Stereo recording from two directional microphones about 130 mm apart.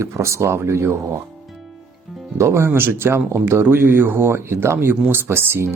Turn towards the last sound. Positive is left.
turn(degrees=-15)  # may be behind; listen again after turning